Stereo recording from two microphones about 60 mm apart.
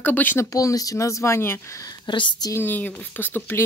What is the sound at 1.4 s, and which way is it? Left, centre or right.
Speech, left.